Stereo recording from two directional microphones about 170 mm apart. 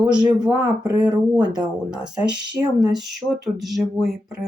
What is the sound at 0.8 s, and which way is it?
Speech, 25° right (ahead or behind).